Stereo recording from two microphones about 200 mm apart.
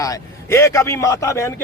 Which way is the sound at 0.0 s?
15° left (ahead or behind).